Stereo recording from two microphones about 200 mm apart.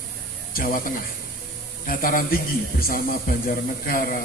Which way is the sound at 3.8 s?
45° left (ahead or behind).